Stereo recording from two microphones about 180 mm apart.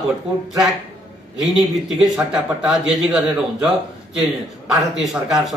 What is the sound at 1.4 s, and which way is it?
A man's voice, centre (ahead or behind).